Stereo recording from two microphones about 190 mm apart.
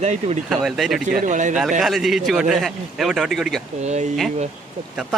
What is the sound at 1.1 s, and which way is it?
Speech, 40° right (ahead or behind).